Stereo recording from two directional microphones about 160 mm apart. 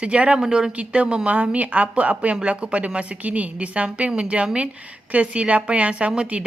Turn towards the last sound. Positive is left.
turn(degrees=-5)  # may be behind; listen again after turning